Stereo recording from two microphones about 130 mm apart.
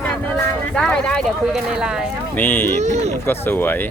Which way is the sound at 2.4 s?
15° left (ahead or behind).